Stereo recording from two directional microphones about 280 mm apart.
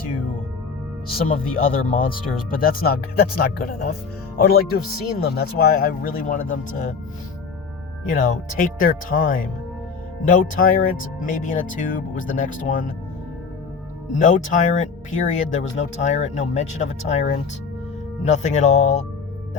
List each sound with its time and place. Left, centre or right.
1.5 s speech: left
8.1 s speech: left
14.2 s speech: left